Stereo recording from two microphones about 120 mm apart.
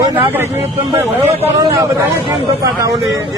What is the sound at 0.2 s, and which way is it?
Speech, 15° right (ahead or behind).